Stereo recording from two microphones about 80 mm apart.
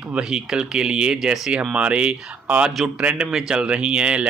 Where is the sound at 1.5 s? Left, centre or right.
Centre.